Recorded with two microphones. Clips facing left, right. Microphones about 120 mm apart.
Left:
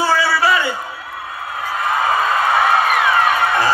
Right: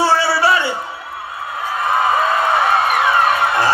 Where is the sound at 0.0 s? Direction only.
30° right (ahead or behind).